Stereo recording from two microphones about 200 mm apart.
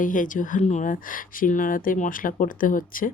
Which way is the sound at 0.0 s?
40° left (ahead or behind).